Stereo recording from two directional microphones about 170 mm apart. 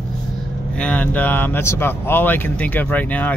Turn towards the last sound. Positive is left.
turn(degrees=10)  # may be behind; listen again after turning